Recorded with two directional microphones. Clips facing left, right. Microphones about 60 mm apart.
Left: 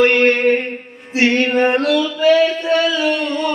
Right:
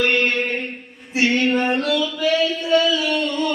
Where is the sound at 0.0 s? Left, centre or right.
Left.